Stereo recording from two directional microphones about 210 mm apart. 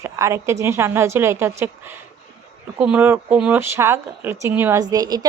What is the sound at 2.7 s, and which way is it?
Speech, 5° right (ahead or behind).